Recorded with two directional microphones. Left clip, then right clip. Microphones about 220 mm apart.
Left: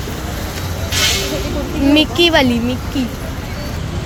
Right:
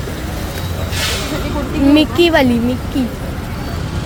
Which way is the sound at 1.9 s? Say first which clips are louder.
Right 1 dB; 10° right (ahead or behind).